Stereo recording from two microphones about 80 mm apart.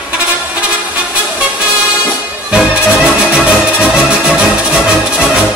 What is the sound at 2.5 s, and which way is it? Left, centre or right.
Music, centre.